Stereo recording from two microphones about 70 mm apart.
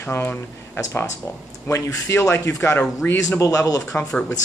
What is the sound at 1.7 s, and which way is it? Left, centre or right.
A man's voice, left.